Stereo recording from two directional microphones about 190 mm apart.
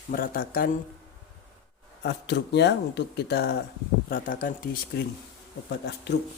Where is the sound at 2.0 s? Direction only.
60° left (ahead or behind).